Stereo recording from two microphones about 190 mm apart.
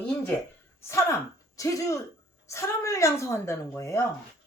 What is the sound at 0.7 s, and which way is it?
A woman's voice, 15° left (ahead or behind).